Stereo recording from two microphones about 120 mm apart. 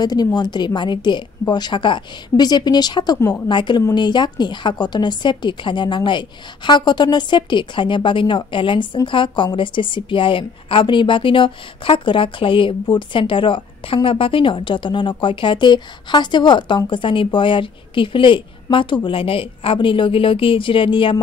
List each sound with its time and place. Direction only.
0.0 s speech: 35° left (ahead or behind)
3.2 s a woman's voice: 20° left (ahead or behind)
3.4 s speech: 40° left (ahead or behind)